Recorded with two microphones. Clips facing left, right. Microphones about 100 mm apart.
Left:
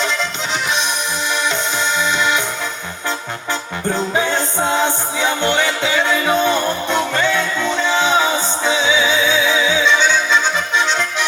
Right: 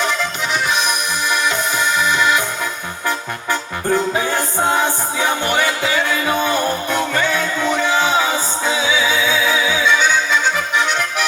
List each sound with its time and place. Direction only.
0.5 s music: 25° left (ahead or behind)
4.3 s music: 25° left (ahead or behind)